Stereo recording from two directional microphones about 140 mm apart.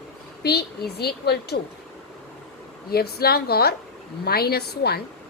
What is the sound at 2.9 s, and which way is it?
A woman's voice, 90° left.